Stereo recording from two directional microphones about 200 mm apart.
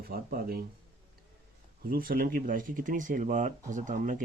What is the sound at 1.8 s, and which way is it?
Speech, 45° right (ahead or behind).